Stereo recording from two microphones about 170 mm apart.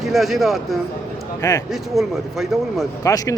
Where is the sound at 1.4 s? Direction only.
20° left (ahead or behind).